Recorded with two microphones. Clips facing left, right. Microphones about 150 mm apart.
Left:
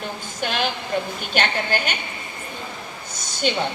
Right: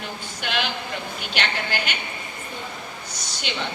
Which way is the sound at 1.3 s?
45° left (ahead or behind).